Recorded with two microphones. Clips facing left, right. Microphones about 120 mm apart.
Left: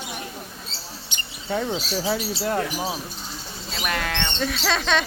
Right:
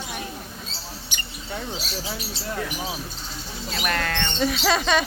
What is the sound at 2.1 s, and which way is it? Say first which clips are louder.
Speech: left 8 dB; 85° left.